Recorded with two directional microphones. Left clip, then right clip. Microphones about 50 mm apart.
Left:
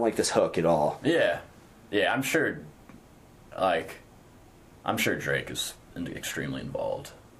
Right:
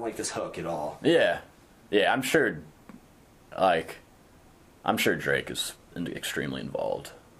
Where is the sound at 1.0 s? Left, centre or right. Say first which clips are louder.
Right 2 dB; right.